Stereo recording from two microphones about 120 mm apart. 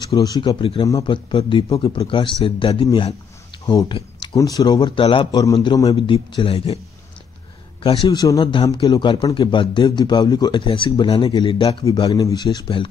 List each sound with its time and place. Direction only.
0.1 s a man's voice: 35° left (ahead or behind)
0.5 s speech: 50° left (ahead or behind)
3.9 s a sound: 40° left (ahead or behind)
4.4 s a man's voice: 30° left (ahead or behind)
4.9 s speech: 45° left (ahead or behind)
5.3 s a man's voice: 30° left (ahead or behind)
5.9 s speech: 50° left (ahead or behind)
7.8 s a man's voice: 45° left (ahead or behind)
12.2 s a man's voice: 30° left (ahead or behind)